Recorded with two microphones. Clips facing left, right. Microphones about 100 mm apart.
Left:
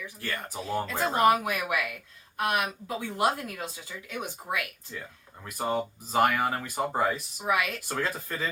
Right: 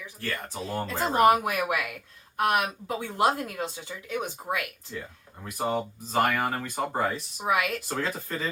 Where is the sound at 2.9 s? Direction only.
25° right (ahead or behind).